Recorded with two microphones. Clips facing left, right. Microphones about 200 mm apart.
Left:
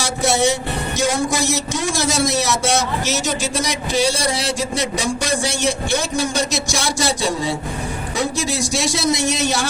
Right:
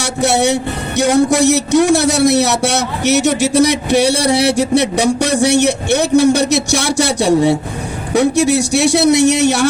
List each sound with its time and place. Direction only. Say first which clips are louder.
0.0 s speech: right 4 dB; 65° right (ahead or behind)